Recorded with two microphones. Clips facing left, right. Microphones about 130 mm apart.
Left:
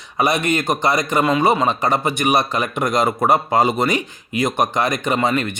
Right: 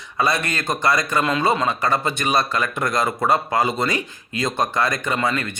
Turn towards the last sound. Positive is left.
turn(degrees=20)  # may be behind; listen again after turning